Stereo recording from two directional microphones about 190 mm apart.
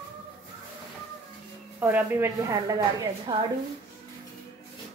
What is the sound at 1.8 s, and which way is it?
A woman's voice, 10° right (ahead or behind).